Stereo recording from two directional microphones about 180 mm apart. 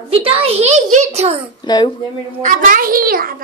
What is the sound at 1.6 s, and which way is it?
Speech, 25° left (ahead or behind).